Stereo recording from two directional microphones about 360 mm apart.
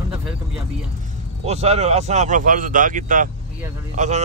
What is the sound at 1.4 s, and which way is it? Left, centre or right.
A man's voice, centre.